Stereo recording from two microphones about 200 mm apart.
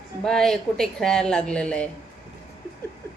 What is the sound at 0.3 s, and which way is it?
A woman's voice, centre (ahead or behind).